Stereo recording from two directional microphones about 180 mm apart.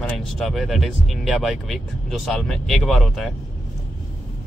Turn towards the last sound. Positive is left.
turn(degrees=0)  # may be behind; listen again after turning